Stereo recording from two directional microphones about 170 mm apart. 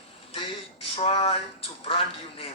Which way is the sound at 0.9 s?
35° left (ahead or behind).